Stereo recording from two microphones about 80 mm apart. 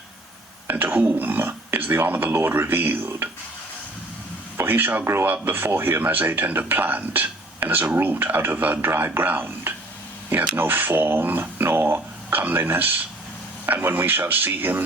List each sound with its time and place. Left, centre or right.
0.7 s speech: right
4.5 s speech: right